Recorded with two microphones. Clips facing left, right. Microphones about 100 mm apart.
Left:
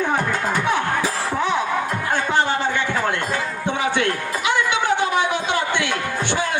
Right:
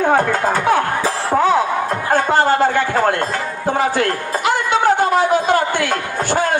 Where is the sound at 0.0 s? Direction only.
50° right (ahead or behind).